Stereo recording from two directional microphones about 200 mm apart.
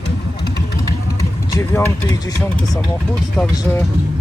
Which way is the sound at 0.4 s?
55° left (ahead or behind).